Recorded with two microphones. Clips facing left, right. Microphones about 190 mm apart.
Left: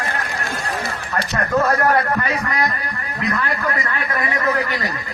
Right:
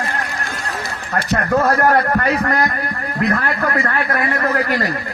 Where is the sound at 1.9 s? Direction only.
55° right (ahead or behind).